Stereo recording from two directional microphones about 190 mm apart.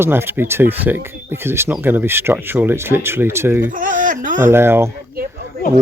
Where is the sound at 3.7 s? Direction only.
45° right (ahead or behind).